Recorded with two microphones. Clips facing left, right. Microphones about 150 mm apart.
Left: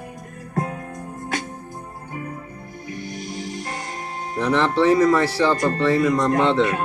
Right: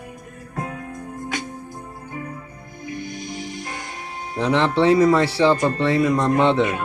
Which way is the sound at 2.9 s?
35° left (ahead or behind).